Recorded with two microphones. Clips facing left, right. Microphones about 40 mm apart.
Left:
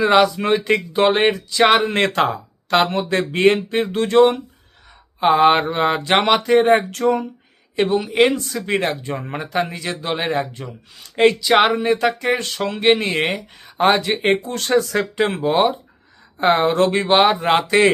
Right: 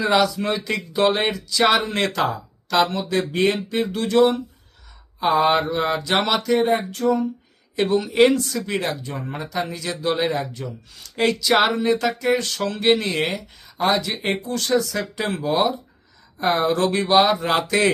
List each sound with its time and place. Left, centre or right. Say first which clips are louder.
0.0 s speech: left 4 dB; left
6.7 s speech: left 4 dB; left
7.8 s speech: left 1 dB; centre; by 17.9 s left